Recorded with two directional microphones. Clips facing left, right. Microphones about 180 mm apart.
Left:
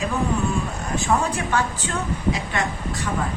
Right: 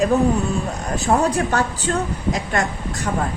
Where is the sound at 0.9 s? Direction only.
40° right (ahead or behind).